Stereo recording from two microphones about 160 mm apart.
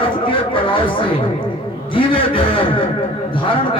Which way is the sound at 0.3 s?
30° left (ahead or behind).